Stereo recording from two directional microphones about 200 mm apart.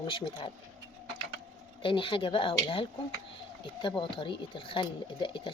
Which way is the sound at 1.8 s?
25° left (ahead or behind).